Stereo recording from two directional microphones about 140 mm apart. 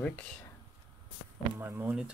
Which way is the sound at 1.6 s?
15° right (ahead or behind).